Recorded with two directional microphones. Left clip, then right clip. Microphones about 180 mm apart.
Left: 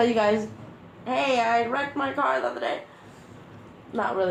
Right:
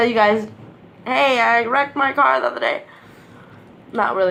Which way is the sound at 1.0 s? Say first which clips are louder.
Right 8 dB; 55° right (ahead or behind).